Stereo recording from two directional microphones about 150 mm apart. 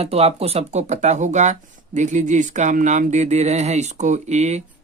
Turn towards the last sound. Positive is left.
turn(degrees=-50)  # may be behind; listen again after turning